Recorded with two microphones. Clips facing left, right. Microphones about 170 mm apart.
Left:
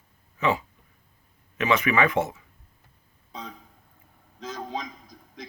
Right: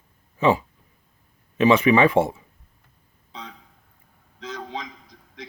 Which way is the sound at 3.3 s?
45° left (ahead or behind).